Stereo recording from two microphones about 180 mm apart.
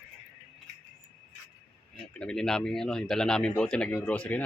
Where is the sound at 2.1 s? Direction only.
5° left (ahead or behind).